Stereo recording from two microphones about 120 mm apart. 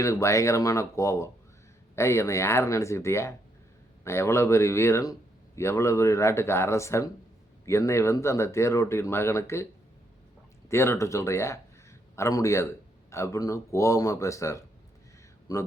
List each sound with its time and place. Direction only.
0.0 s speech: 25° left (ahead or behind)
10.7 s speech: 20° left (ahead or behind)